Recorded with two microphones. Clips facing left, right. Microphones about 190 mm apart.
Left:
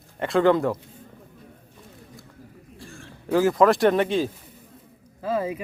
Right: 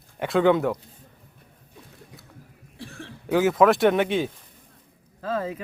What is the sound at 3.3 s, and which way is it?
Speech, centre (ahead or behind).